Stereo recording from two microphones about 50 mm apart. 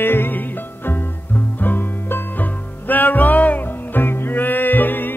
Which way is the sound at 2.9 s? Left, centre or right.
Left.